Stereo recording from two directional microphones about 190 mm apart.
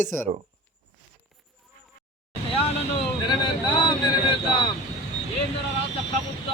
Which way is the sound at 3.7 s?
25° left (ahead or behind).